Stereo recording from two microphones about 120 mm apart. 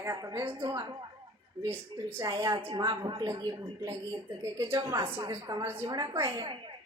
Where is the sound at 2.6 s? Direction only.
40° right (ahead or behind); by 5.9 s 20° right (ahead or behind).